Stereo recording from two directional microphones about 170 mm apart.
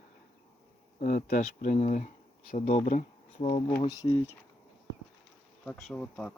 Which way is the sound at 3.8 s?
20° left (ahead or behind).